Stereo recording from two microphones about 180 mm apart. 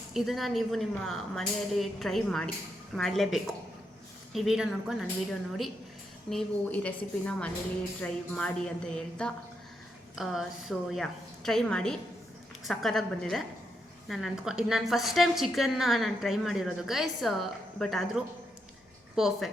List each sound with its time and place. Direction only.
0.1 s a woman's voice: centre (ahead or behind)